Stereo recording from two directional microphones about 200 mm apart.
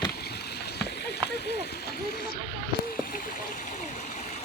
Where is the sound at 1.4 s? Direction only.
55° left (ahead or behind).